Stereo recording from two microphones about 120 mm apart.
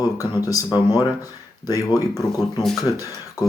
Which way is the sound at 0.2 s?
30° left (ahead or behind).